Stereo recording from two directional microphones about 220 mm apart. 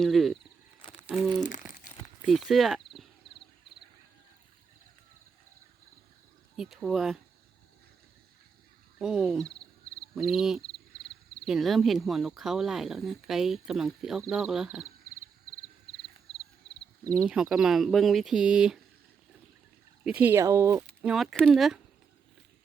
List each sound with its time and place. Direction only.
0.0 s speech: centre (ahead or behind)
0.8 s a sound: 25° left (ahead or behind)
1.0 s speech: 5° right (ahead or behind)
1.4 s speech: 35° left (ahead or behind)
2.2 s speech: centre (ahead or behind)
6.6 s speech: centre (ahead or behind)
9.0 s speech: 5° right (ahead or behind)
16.3 s a sound: centre (ahead or behind)
17.2 s speech: 5° right (ahead or behind)
20.1 s speech: 5° right (ahead or behind)